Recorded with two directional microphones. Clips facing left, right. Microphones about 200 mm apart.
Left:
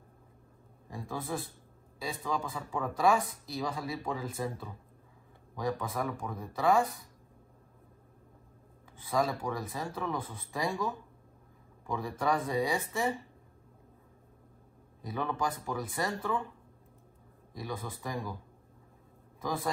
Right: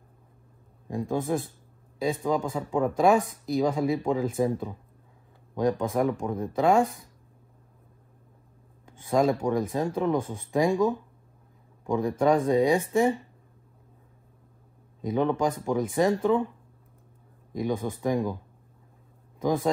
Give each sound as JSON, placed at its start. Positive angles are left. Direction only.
{"t": 0.8, "sound": "speech", "side_deg": -20}
{"t": 9.1, "sound": "speech", "side_deg": -25}
{"t": 11.8, "sound": "speech", "side_deg": -20}
{"t": 15.0, "sound": "speech", "side_deg": -20}
{"t": 17.6, "sound": "speech", "side_deg": -20}
{"t": 19.4, "sound": "speech", "side_deg": -20}